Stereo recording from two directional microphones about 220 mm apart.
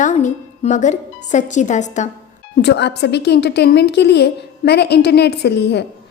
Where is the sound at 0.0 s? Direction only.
35° left (ahead or behind).